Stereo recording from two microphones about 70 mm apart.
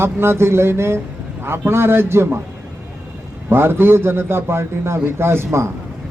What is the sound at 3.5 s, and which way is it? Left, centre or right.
Speech, right.